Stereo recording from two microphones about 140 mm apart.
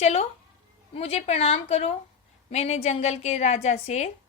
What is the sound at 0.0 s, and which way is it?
A woman's voice, 50° left (ahead or behind).